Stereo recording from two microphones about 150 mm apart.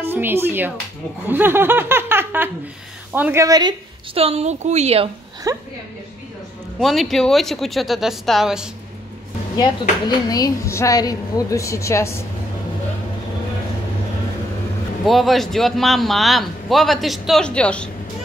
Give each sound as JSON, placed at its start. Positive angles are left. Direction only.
{"t": 0.0, "sound": "laughter", "side_deg": -15}
{"t": 3.1, "sound": "speech", "side_deg": -15}
{"t": 4.1, "sound": "a woman's voice", "side_deg": -40}
{"t": 5.5, "sound": "speech", "side_deg": -25}
{"t": 6.8, "sound": "a man's voice", "side_deg": 0}
{"t": 9.6, "sound": "a woman's voice", "side_deg": 25}
{"t": 15.0, "sound": "a man's voice", "side_deg": 0}